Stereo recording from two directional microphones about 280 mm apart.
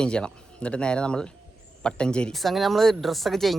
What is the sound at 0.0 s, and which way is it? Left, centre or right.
Speech, centre.